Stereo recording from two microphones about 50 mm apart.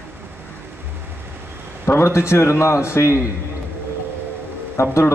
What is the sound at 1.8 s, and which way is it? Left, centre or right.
A man's voice, left.